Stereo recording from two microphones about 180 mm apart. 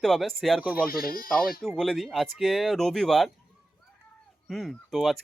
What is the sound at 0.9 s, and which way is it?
Speech, 55° left (ahead or behind).